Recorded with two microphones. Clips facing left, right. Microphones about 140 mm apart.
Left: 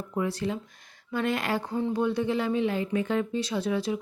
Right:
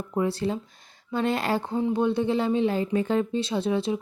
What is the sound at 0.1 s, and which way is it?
A woman's voice, 30° right (ahead or behind).